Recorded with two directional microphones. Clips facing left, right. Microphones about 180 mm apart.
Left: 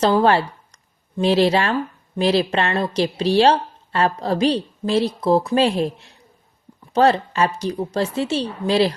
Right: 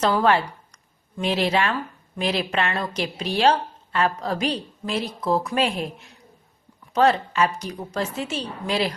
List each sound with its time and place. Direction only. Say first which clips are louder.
0.0 s speech: left 4 dB; 30° left (ahead or behind)